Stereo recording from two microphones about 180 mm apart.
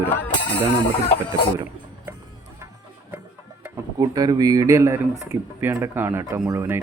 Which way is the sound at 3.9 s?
20° right (ahead or behind).